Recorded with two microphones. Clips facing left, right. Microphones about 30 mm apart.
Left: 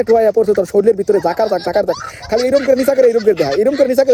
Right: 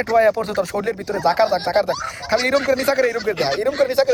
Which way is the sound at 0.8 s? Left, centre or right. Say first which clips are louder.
Left 12 dB; right.